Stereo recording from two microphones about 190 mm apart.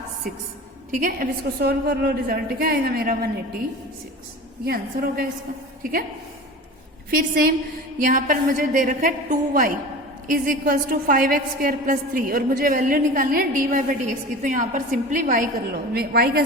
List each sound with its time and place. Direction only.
0.9 s a woman's voice: 45° right (ahead or behind)
4.6 s a woman's voice: 50° right (ahead or behind)
7.1 s a woman's voice: 50° right (ahead or behind)
15.9 s a woman's voice: 55° right (ahead or behind)